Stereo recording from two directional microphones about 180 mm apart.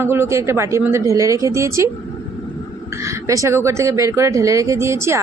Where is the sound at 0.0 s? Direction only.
15° right (ahead or behind).